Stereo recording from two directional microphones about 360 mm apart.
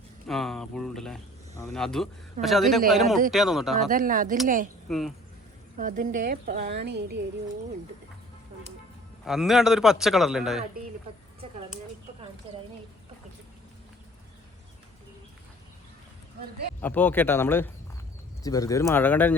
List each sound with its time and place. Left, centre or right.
0.3 s speech: centre
3.8 s a woman's voice: right
4.9 s speech: centre
5.7 s a woman's voice: right
9.2 s speech: centre
16.8 s speech: centre